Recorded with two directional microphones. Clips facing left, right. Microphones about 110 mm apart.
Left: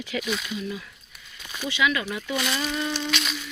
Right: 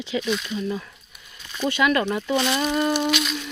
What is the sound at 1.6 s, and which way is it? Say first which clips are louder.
Speech: right 5 dB; 45° right (ahead or behind).